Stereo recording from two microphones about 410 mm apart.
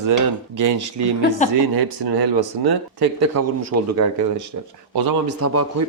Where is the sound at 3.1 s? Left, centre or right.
Right.